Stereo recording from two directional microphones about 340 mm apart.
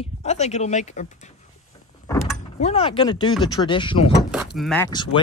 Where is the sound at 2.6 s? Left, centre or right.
Centre.